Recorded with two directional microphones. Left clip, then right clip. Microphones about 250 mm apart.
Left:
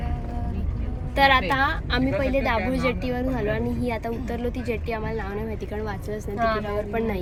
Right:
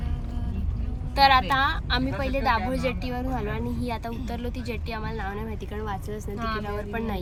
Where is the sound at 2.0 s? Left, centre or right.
Centre.